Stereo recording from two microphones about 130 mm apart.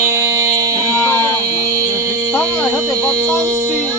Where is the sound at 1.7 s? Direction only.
25° right (ahead or behind).